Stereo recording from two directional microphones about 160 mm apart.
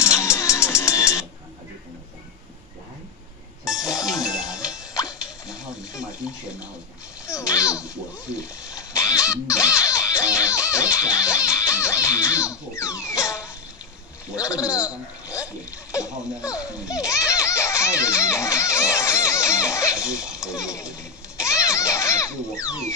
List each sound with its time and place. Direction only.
0.0 s music: 20° left (ahead or behind)
4.3 s music: 5° right (ahead or behind)
7.2 s a sound: 20° left (ahead or behind)
7.8 s a sound: 5° right (ahead or behind)
8.6 s music: 20° left (ahead or behind)
14.3 s a man's voice: 20° left (ahead or behind)
15.9 s a sound: 20° left (ahead or behind)
16.8 s music: 20° left (ahead or behind)
20.9 s children playing: 20° left (ahead or behind)